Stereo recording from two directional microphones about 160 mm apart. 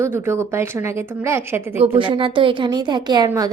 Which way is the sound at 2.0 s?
30° right (ahead or behind).